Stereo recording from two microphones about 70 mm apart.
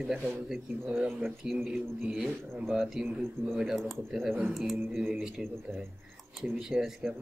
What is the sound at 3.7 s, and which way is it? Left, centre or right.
Speech, centre.